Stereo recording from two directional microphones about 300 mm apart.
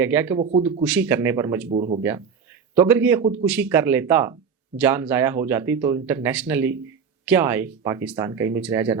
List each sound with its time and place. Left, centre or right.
0.0 s speech: centre
1.7 s speech: right
2.0 s speech: centre